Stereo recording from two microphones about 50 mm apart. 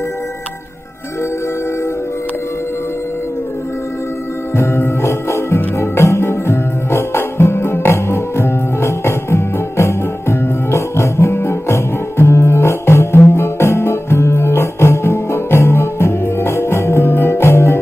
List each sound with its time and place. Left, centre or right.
4.6 s music: left
17.1 s music: left